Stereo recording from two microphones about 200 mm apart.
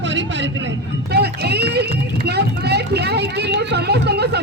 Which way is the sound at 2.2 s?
55° right (ahead or behind).